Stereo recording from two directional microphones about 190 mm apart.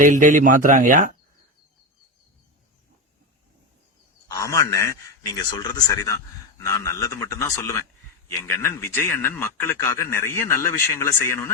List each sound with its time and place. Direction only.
0.0 s speech: 45° right (ahead or behind)
4.3 s a man's voice: 15° left (ahead or behind)